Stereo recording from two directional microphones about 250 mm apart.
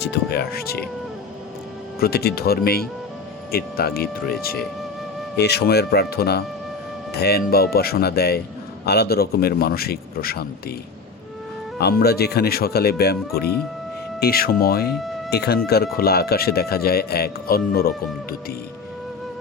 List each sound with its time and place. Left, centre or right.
0.0 s speech: left
2.0 s speech: left
5.4 s speech: left
11.8 s speech: left
14.9 s speech: centre
15.3 s speech: left